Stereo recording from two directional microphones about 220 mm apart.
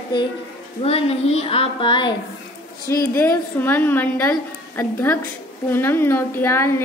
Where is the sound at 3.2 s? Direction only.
10° left (ahead or behind).